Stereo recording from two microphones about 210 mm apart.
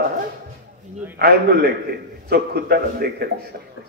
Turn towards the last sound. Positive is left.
turn(degrees=-50)  # may be behind; listen again after turning